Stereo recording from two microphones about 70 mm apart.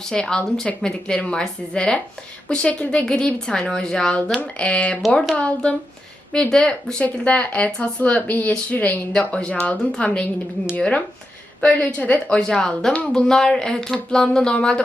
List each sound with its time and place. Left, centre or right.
0.1 s speech: centre
7.0 s speech: centre
9.1 s speech: centre